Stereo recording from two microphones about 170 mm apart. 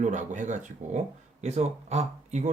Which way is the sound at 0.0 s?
45° right (ahead or behind).